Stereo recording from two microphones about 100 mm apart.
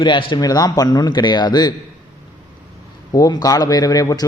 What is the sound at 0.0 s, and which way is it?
Speech, 55° left (ahead or behind).